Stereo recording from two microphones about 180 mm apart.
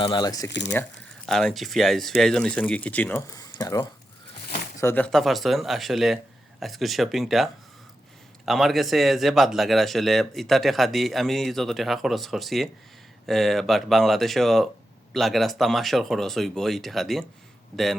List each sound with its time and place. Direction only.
0.0 s speech: 25° left (ahead or behind)
0.5 s speech: 75° left (ahead or behind)
1.3 s speech: centre (ahead or behind); by 3.8 s 20° left (ahead or behind)
4.8 s speech: 10° left (ahead or behind)